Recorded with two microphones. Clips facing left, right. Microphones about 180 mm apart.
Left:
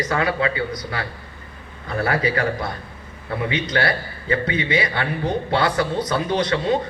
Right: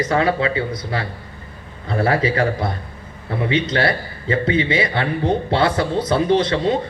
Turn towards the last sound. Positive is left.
turn(degrees=-25)  # may be behind; listen again after turning